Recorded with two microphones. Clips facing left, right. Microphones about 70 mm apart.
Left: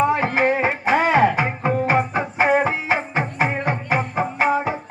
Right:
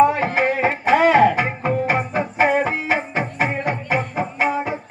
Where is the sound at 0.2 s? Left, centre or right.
Centre.